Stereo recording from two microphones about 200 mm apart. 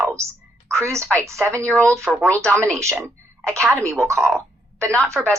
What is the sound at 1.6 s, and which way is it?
Speech, 5° left (ahead or behind).